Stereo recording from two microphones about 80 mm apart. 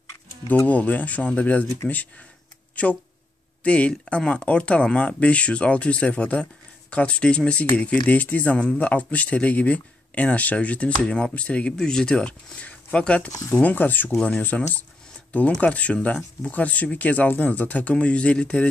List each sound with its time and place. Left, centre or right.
0.7 s speech: centre
2.7 s speech: centre
13.3 s speech: left
13.6 s speech: left
15.6 s speech: centre